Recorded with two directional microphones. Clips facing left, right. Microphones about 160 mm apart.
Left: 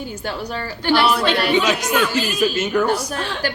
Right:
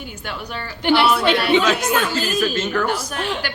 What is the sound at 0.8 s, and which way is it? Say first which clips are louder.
Speech: right 1 dB; 20° right (ahead or behind).